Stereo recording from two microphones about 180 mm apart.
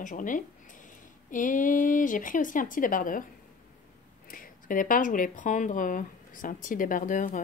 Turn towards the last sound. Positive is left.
turn(degrees=45)  # may be behind; listen again after turning